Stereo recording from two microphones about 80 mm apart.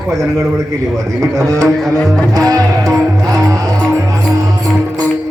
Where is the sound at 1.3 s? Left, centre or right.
Right.